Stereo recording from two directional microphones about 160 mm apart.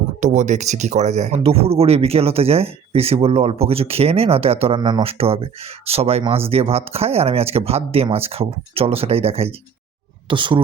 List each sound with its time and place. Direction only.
0.2 s speech: 50° right (ahead or behind); by 10.6 s 30° right (ahead or behind)